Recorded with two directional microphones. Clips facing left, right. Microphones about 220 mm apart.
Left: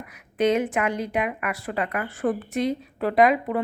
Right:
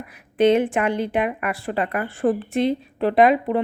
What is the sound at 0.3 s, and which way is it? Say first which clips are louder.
A woman's voice: right 5 dB; 30° right (ahead or behind).